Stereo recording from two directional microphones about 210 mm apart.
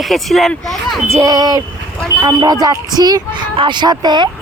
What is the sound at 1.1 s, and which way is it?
Speech, 15° right (ahead or behind).